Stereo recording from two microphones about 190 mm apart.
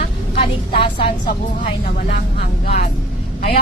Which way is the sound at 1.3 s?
45° left (ahead or behind).